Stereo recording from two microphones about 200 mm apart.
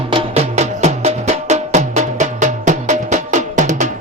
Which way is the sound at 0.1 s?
30° right (ahead or behind).